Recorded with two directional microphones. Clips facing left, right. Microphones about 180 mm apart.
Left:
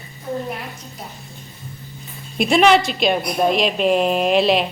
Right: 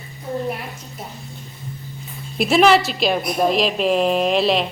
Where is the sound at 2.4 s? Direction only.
Centre (ahead or behind).